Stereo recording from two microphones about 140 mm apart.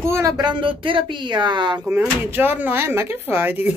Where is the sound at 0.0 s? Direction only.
20° right (ahead or behind).